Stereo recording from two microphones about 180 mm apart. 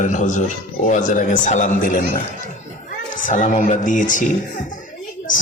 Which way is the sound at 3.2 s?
45° left (ahead or behind).